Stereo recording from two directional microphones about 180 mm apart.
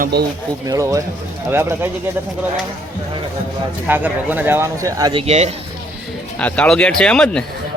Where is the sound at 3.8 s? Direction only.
10° right (ahead or behind); by 5.5 s 35° right (ahead or behind).